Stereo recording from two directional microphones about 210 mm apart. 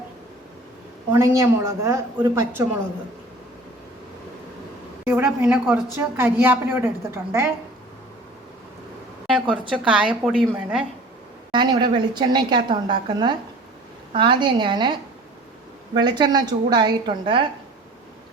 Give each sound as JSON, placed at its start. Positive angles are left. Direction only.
{"t": 1.1, "sound": "a woman's voice", "side_deg": -15}
{"t": 5.0, "sound": "a woman's voice", "side_deg": -10}
{"t": 9.2, "sound": "a woman's voice", "side_deg": 0}
{"t": 11.5, "sound": "a woman's voice", "side_deg": -20}
{"t": 16.0, "sound": "a woman's voice", "side_deg": -20}